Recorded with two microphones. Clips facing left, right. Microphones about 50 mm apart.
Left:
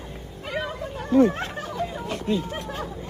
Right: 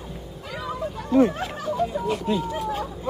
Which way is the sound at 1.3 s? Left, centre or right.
Left.